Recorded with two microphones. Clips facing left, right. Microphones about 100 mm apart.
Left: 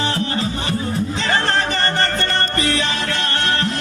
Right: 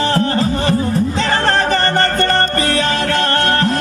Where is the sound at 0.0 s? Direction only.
45° right (ahead or behind).